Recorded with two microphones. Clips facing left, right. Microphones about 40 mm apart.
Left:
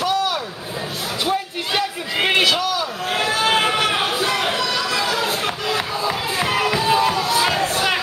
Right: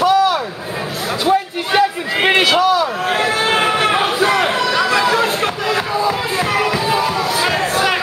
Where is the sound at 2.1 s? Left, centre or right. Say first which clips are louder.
Right 3 dB; right.